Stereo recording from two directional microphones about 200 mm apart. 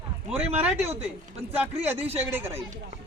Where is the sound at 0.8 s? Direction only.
30° right (ahead or behind).